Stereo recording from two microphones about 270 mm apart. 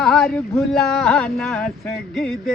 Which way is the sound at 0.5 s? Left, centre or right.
Centre.